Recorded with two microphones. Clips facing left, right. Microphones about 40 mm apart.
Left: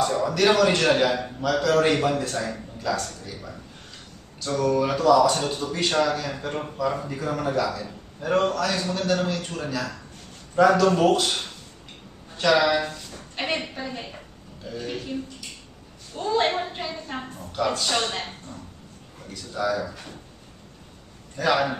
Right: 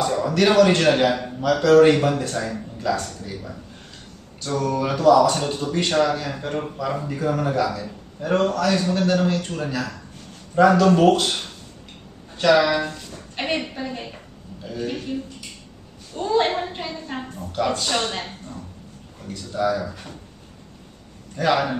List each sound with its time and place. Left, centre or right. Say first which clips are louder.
0.1 s a sound: right 1 dB; centre
0.5 s speech: right 4 dB; centre
8.8 s a man's voice: right 5 dB; centre
9.1 s a woman's voice: right 3 dB; centre
16.2 s a sound: right 3 dB; centre
19.5 s speech: right 3 dB; centre
21.4 s speech: right 2 dB; centre